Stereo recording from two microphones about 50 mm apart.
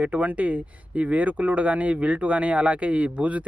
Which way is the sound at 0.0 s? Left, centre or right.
Right.